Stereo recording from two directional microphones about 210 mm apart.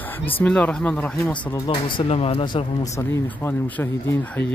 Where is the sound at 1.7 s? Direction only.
30° left (ahead or behind).